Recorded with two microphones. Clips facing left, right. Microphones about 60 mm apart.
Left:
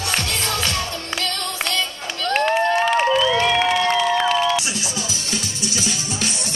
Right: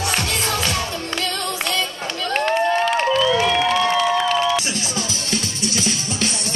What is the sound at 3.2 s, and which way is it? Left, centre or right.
Music, centre.